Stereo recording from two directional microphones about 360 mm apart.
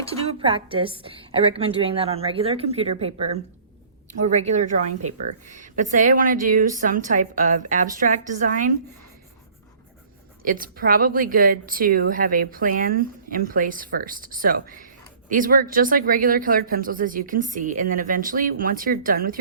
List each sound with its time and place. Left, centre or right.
0.1 s a woman's voice: centre
10.4 s speech: right